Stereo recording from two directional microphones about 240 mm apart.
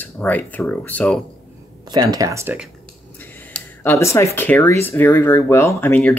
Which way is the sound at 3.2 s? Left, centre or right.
Centre.